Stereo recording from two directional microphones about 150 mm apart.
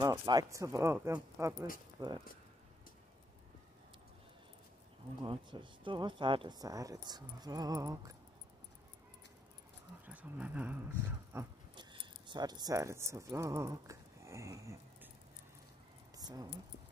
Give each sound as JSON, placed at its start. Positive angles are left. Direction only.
{"t": 0.0, "sound": "speech", "side_deg": -20}
{"t": 5.2, "sound": "speech", "side_deg": -30}
{"t": 10.0, "sound": "speech", "side_deg": -10}
{"t": 11.7, "sound": "speech", "side_deg": -30}
{"t": 16.2, "sound": "keys jangling", "side_deg": -25}